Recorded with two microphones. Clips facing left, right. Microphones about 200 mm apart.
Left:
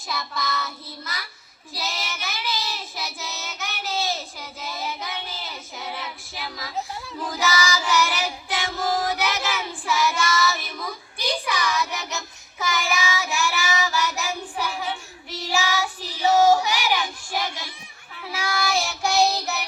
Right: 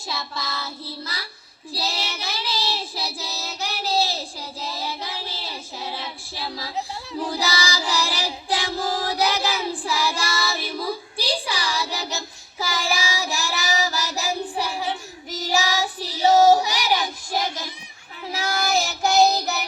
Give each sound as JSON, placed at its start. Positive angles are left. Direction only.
{"t": 0.1, "sound": "child singing", "side_deg": -30}